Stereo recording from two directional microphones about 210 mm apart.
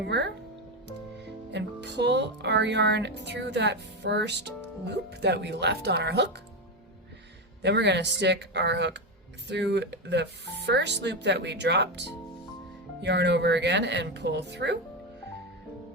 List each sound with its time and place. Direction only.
0.0 s speech: 55° right (ahead or behind)
7.6 s speech: 55° right (ahead or behind)